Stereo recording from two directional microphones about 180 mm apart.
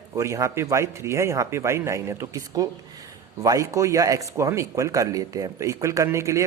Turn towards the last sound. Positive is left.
turn(degrees=-15)  # may be behind; listen again after turning